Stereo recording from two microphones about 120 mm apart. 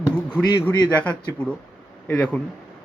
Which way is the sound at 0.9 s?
10° left (ahead or behind).